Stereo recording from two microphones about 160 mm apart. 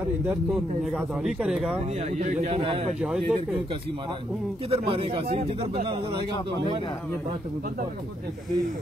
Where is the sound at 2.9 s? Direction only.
5° right (ahead or behind).